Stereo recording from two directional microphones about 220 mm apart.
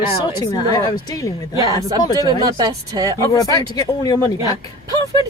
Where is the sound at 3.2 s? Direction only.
15° left (ahead or behind).